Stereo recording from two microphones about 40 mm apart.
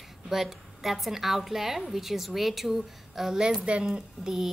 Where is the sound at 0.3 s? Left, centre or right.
Centre.